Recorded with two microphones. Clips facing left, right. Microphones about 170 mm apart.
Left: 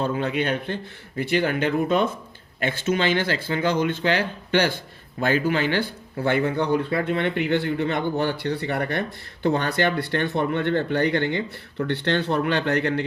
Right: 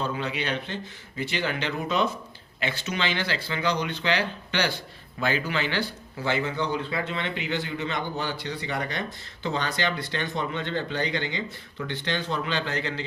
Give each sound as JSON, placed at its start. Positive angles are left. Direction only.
{"t": 0.0, "sound": "speech", "side_deg": 50}